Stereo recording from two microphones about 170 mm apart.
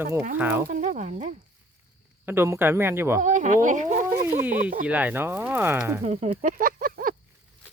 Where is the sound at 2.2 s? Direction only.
15° right (ahead or behind).